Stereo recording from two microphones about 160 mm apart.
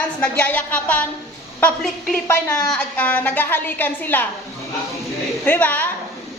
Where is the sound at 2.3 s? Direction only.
15° left (ahead or behind).